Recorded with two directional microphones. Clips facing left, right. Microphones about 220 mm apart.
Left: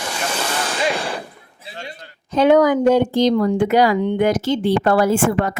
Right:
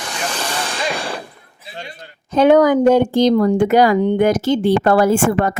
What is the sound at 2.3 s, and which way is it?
Speech, 50° right (ahead or behind).